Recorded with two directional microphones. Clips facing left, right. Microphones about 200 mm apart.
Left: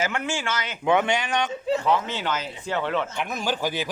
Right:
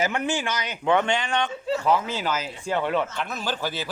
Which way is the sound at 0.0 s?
15° right (ahead or behind).